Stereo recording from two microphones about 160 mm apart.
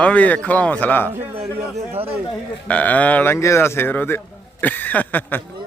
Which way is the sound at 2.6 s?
10° left (ahead or behind).